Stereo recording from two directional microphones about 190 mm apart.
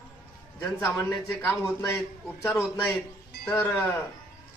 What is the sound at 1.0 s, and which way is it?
Speech, 10° left (ahead or behind).